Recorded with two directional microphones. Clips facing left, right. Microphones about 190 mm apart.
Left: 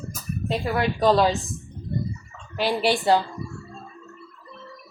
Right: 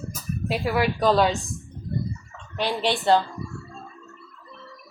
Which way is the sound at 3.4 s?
Centre (ahead or behind).